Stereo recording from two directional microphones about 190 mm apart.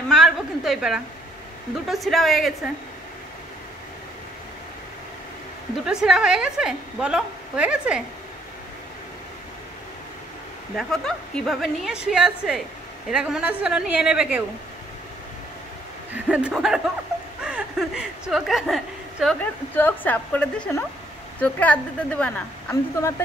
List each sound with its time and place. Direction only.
0.1 s a sound: centre (ahead or behind)
1.9 s a woman's voice: centre (ahead or behind)
5.9 s a woman's voice: 5° right (ahead or behind)
10.8 s a woman's voice: 5° left (ahead or behind)
16.3 s a woman's voice: 5° right (ahead or behind)
19.7 s a woman's voice: 10° left (ahead or behind)